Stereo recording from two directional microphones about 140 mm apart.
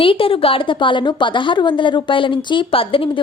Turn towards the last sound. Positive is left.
turn(degrees=40)  # may be behind; listen again after turning